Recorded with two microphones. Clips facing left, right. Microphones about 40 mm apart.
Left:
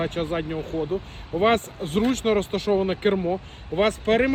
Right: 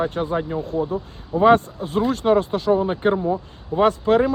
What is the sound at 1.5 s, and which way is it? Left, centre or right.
Speech, left.